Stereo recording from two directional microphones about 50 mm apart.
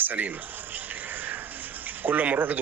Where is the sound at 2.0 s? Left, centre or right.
Right.